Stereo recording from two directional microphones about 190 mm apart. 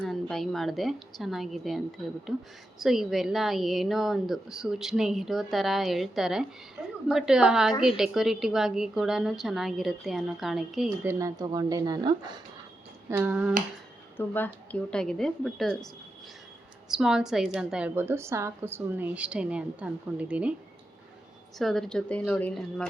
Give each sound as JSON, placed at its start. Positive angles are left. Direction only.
{"t": 0.0, "sound": "a woman's voice", "side_deg": 0}
{"t": 6.8, "sound": "a woman's voice", "side_deg": -10}
{"t": 11.1, "sound": "speech", "side_deg": -15}
{"t": 13.1, "sound": "a woman's voice", "side_deg": -10}
{"t": 14.2, "sound": "a woman's voice", "side_deg": 10}
{"t": 16.9, "sound": "a woman's voice", "side_deg": -5}
{"t": 21.6, "sound": "a woman's voice", "side_deg": 0}